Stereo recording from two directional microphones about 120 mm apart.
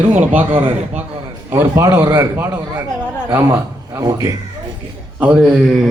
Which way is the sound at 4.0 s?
30° right (ahead or behind).